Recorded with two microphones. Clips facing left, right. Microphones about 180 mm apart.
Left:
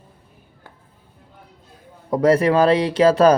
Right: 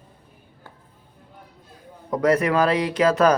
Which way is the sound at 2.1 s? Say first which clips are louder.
Left 4 dB; 30° left (ahead or behind).